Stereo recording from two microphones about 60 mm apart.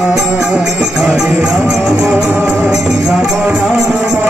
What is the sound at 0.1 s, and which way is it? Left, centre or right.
Music, centre.